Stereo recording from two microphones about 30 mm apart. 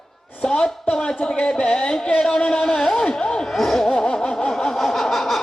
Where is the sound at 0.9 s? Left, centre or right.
Left.